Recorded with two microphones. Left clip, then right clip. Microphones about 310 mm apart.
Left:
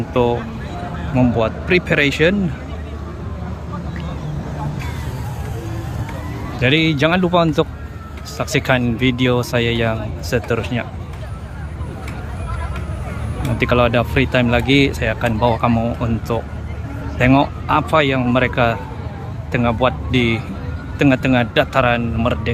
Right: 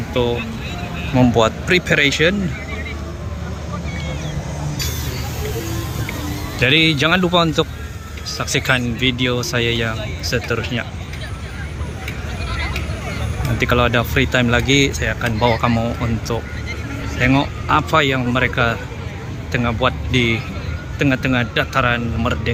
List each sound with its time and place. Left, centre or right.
0.1 s speech: centre
6.6 s speech: centre
13.6 s speech: centre